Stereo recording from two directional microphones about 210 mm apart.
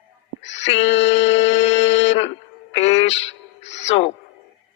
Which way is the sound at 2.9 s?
60° left (ahead or behind).